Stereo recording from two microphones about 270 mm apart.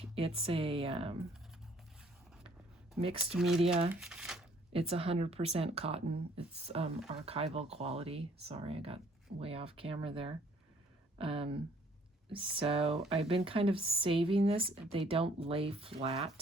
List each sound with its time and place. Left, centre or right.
0.2 s speech: centre
3.2 s speech: centre
4.7 s speech: right